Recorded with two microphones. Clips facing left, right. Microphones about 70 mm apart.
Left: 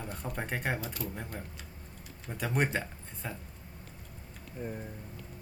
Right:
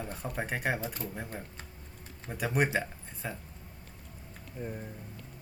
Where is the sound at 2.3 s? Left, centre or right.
Centre.